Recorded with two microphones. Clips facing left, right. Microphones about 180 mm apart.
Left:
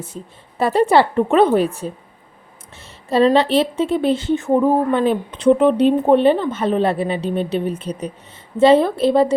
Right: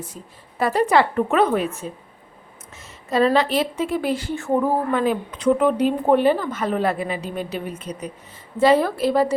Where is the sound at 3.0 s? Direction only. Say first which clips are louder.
Left 4 dB; 30° left (ahead or behind).